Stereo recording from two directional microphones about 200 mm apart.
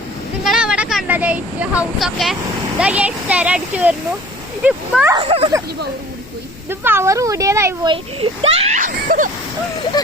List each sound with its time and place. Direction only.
0.4 s speech: centre (ahead or behind)
5.1 s speech: 30° right (ahead or behind)
6.7 s speech: 10° right (ahead or behind)
8.2 s speech: 30° right (ahead or behind)